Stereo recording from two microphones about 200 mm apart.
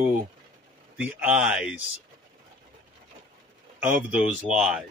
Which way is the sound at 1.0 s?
5° right (ahead or behind).